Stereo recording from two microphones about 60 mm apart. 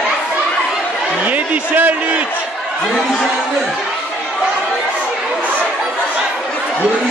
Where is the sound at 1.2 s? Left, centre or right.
Right.